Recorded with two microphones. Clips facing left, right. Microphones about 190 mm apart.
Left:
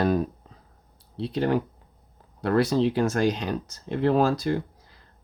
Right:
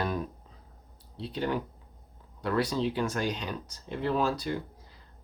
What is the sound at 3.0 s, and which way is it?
Speech, 45° left (ahead or behind).